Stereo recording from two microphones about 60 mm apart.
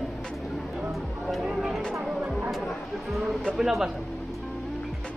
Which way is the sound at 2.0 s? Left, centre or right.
Centre.